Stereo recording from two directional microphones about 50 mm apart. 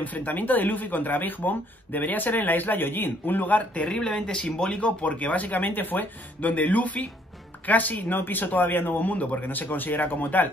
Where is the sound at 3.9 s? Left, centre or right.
Centre.